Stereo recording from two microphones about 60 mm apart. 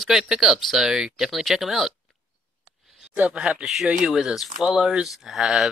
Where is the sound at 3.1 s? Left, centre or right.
Centre.